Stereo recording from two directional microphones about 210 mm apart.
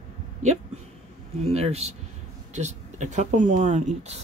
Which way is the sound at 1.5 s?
30° right (ahead or behind).